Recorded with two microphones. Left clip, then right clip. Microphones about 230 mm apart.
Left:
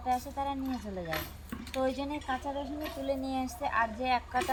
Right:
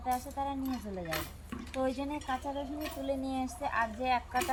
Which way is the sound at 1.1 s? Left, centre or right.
Right.